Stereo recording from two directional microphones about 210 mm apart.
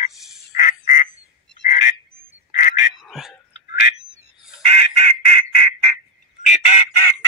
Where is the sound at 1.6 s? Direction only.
35° left (ahead or behind).